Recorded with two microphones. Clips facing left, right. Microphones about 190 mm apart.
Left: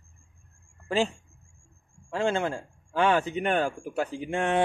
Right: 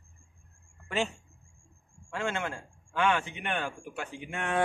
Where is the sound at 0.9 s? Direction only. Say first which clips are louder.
Left 5 dB; 30° left (ahead or behind).